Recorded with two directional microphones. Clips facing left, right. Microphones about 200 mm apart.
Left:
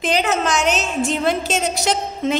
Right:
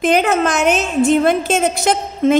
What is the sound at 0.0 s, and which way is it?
A woman's voice, 55° right (ahead or behind).